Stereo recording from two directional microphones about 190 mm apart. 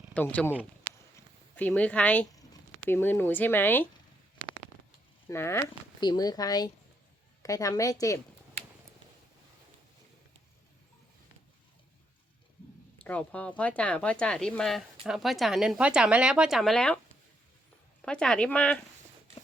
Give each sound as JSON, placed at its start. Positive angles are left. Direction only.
{"t": 0.1, "sound": "speech", "side_deg": 5}
{"t": 1.1, "sound": "a sound", "side_deg": 10}
{"t": 2.3, "sound": "speech", "side_deg": 15}
{"t": 5.3, "sound": "speech", "side_deg": 15}
{"t": 13.0, "sound": "speech", "side_deg": 5}
{"t": 18.0, "sound": "speech", "side_deg": 5}